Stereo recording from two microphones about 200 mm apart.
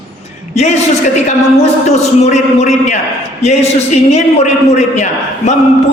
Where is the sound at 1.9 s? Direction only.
35° left (ahead or behind).